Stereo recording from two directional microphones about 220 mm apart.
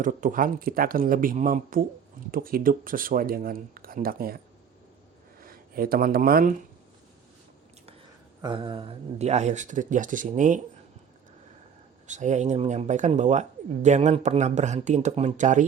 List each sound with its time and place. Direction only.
0.0 s speech: 35° right (ahead or behind)
5.4 s speech: 40° right (ahead or behind)
8.4 s speech: 20° right (ahead or behind)
12.0 s speech: 35° right (ahead or behind)